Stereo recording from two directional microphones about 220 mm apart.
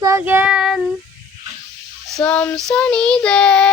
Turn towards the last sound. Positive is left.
turn(degrees=5)  # may be behind; listen again after turning